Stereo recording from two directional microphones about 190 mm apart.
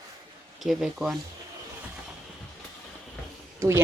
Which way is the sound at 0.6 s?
Centre (ahead or behind).